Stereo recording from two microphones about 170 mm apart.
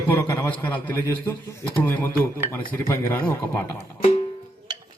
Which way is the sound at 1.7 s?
10° left (ahead or behind).